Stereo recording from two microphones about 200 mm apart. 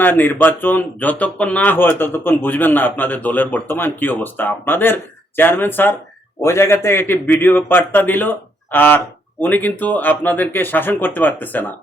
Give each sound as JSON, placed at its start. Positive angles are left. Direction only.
{"t": 0.0, "sound": "speech", "side_deg": 10}